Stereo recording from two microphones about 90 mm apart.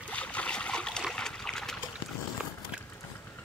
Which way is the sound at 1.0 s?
5° left (ahead or behind).